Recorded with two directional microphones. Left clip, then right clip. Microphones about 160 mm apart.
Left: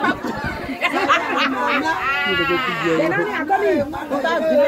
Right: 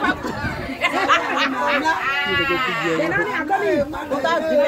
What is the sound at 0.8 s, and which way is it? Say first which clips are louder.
Speech: even; 35° right (ahead or behind).